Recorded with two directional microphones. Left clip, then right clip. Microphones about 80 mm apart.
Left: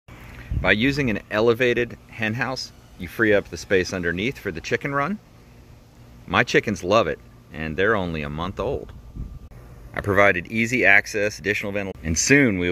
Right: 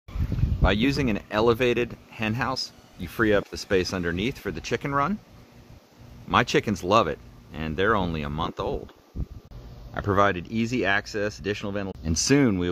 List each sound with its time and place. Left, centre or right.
0.6 s speech: centre
6.3 s speech: centre
8.5 s speech: centre
9.9 s speech: right